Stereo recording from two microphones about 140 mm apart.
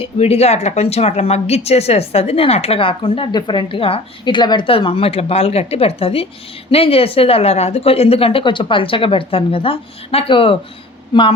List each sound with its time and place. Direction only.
0.0 s a woman's voice: 45° left (ahead or behind)